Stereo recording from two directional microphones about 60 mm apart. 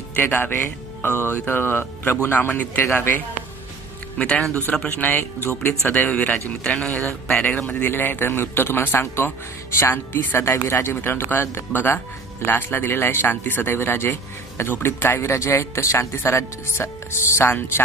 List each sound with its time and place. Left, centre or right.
0.1 s speech: left
4.2 s speech: left
6.6 s speech: centre
7.4 s speech: left